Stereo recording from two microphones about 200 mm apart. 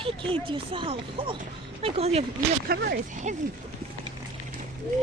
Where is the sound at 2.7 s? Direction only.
50° right (ahead or behind).